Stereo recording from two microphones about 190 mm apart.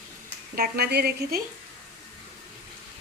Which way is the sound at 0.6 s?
55° right (ahead or behind).